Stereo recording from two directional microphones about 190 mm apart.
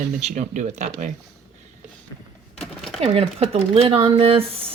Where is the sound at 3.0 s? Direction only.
30° right (ahead or behind).